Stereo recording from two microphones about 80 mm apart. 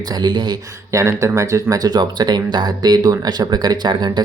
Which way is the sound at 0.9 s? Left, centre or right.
Right.